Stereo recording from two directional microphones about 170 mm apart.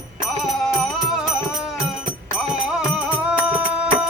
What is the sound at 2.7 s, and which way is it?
Music, 5° right (ahead or behind).